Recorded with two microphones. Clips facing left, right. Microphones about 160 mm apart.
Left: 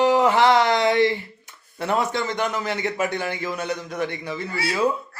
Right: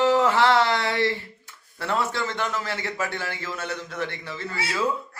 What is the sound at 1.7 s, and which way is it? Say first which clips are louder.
A man's voice: left 3 dB; 20° left (ahead or behind).